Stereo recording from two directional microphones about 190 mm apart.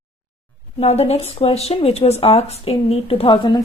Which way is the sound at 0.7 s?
35° left (ahead or behind).